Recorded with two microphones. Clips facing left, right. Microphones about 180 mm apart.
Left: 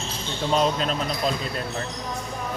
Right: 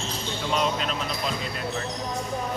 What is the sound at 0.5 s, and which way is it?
Speech, 35° left (ahead or behind).